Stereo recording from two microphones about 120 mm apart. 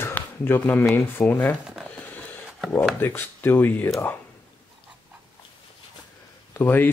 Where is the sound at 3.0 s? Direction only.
15° left (ahead or behind).